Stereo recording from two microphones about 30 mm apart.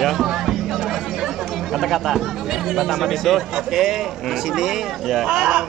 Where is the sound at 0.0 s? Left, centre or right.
Centre.